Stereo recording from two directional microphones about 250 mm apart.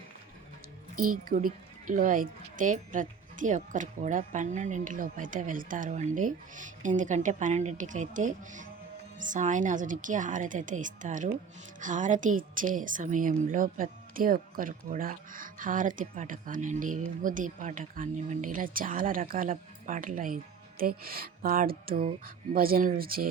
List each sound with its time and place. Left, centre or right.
1.1 s speech: right